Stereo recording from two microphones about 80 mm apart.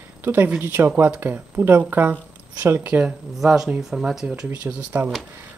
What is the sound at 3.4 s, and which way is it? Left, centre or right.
Speech, centre.